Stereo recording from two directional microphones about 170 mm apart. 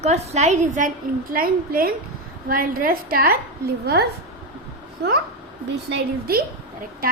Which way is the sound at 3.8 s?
75° right (ahead or behind).